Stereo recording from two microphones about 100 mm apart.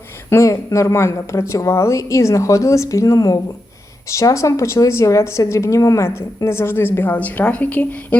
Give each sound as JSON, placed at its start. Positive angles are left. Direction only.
{"t": 0.3, "sound": "speech", "side_deg": 30}